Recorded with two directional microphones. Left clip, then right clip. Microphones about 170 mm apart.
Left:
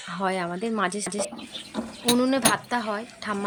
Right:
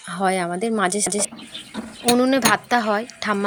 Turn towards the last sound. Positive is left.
turn(degrees=-30)  # may be behind; listen again after turning